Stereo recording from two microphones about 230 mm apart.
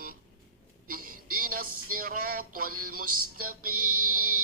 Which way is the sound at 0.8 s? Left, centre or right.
Right.